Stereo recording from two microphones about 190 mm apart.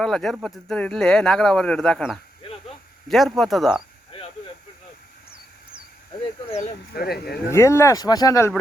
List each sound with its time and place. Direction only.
0.0 s speech: centre (ahead or behind)
2.4 s insect: 30° left (ahead or behind)
3.1 s speech: centre (ahead or behind)
4.1 s a sound: 30° left (ahead or behind)
6.9 s speech: 55° left (ahead or behind)
7.5 s speech: 15° left (ahead or behind)